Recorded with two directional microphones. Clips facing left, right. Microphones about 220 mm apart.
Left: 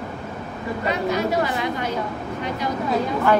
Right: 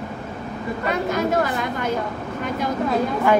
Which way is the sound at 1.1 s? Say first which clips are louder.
Right 2 dB; 50° right (ahead or behind).